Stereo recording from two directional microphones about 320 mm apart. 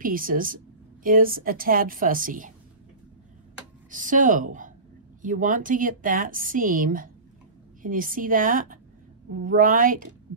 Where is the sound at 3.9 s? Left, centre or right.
Right.